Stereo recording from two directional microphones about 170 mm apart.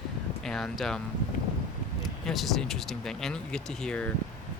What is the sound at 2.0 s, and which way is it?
Speech, centre (ahead or behind).